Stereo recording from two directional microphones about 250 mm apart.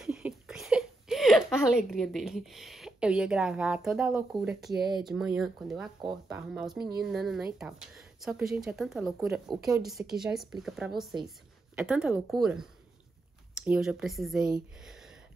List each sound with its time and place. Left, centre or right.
0.0 s speech: centre
5.9 s speech: centre
6.5 s a woman's voice: centre